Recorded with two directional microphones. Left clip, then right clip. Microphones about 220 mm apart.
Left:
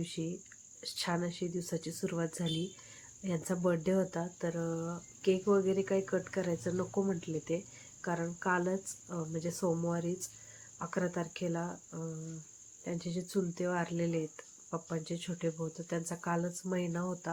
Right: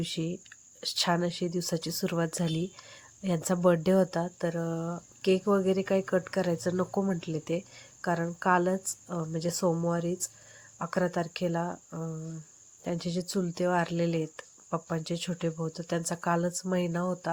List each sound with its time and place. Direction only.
0.0 s speech: 45° right (ahead or behind)